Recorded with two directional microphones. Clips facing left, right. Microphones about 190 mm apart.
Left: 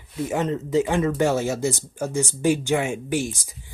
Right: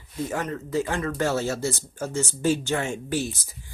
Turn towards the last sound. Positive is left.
turn(degrees=15)  # may be behind; listen again after turning